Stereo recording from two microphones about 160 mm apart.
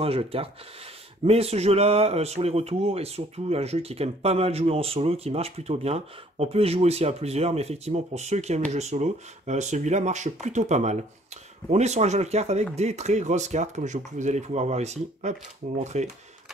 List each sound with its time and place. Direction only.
0.0 s speech: 35° right (ahead or behind)